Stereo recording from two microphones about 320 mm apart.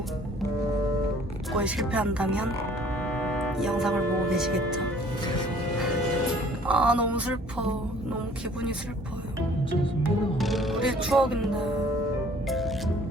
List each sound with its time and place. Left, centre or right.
1.5 s speech: centre
6.7 s speech: centre
10.3 s music: centre
12.5 s music: centre